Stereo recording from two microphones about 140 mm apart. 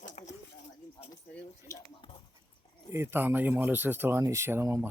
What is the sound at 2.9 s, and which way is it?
Speech, 15° right (ahead or behind).